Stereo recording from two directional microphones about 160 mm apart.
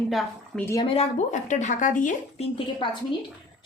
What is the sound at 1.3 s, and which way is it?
Speech, 50° left (ahead or behind).